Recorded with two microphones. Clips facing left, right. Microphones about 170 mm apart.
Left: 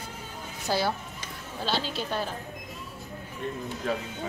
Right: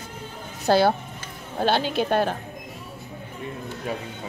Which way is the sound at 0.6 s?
60° right (ahead or behind).